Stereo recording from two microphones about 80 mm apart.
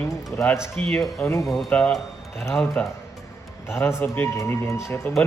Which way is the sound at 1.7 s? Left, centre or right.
Centre.